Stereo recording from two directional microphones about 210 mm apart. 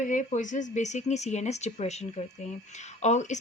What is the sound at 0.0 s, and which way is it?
A woman's voice, 35° left (ahead or behind).